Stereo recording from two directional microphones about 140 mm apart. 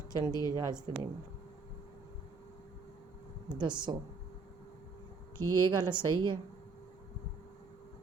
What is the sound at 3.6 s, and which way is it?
Speech, 35° right (ahead or behind).